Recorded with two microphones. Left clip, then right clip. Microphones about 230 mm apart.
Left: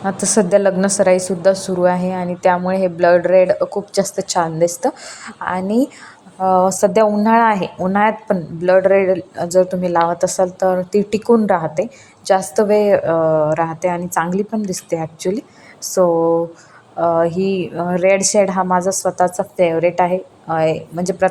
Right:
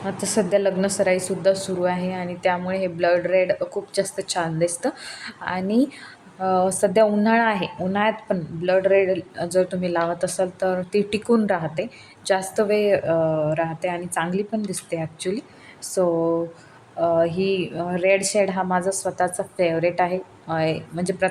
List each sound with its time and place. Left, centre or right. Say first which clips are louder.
0.0 s a woman's voice: left 7 dB; centre